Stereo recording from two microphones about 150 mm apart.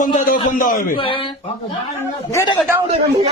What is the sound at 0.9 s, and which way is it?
Speech, 35° left (ahead or behind).